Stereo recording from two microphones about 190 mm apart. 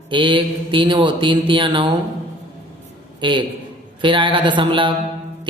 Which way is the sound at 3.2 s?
25° right (ahead or behind).